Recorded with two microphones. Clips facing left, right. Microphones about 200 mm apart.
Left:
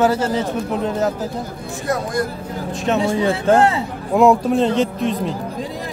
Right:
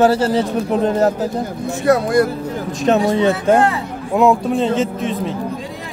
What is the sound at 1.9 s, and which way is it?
Speech, 70° right (ahead or behind).